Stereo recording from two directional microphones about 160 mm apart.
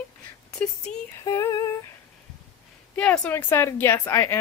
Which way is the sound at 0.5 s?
5° left (ahead or behind).